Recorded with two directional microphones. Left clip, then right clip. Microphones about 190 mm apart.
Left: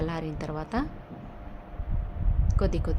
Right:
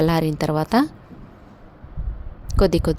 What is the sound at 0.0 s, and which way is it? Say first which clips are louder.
Speech: right 13 dB; 55° right (ahead or behind).